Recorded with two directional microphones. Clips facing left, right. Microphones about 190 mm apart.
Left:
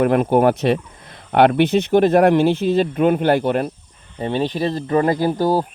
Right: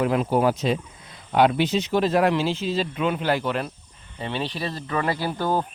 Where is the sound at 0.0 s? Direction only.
55° left (ahead or behind).